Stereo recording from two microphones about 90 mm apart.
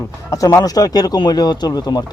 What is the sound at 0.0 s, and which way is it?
Speech, 40° left (ahead or behind).